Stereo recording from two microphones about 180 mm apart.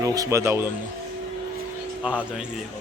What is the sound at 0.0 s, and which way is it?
Speech, 20° right (ahead or behind).